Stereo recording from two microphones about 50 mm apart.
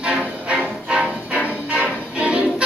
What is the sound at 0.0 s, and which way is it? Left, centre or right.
Music, right.